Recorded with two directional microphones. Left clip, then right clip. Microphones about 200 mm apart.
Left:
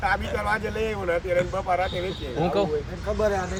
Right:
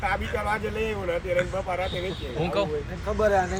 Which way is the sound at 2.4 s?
55° left (ahead or behind).